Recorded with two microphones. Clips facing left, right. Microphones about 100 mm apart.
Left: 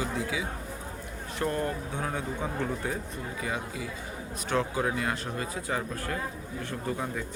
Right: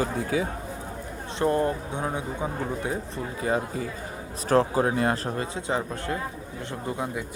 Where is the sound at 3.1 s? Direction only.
35° right (ahead or behind).